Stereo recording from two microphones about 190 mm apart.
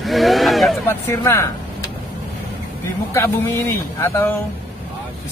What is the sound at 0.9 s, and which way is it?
Speech, 15° left (ahead or behind).